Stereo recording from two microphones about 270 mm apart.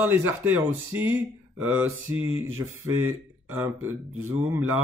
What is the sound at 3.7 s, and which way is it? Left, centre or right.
Speech, right.